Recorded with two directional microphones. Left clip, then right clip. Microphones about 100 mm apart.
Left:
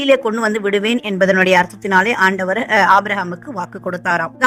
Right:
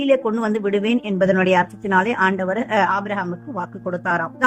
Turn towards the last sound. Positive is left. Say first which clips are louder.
# left 4 dB
turn(degrees=55)  # may be behind; listen again after turning